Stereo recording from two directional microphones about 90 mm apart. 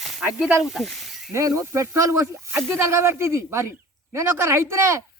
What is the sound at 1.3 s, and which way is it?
Speech, 35° right (ahead or behind).